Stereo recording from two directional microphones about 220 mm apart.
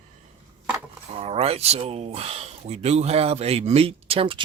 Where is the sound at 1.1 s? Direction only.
30° right (ahead or behind).